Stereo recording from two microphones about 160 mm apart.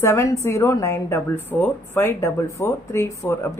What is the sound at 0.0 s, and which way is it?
A woman's voice, 20° left (ahead or behind).